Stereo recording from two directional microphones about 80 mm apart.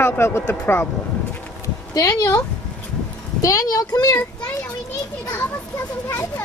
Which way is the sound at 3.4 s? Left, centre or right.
Left.